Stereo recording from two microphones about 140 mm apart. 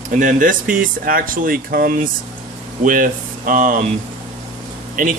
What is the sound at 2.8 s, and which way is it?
Speech, 70° right (ahead or behind).